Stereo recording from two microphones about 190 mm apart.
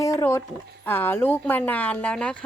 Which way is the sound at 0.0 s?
15° left (ahead or behind).